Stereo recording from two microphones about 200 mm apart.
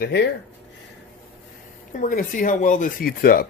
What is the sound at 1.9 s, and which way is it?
Speech, 40° left (ahead or behind).